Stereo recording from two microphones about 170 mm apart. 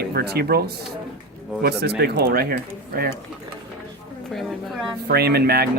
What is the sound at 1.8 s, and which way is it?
Speech, 70° right (ahead or behind).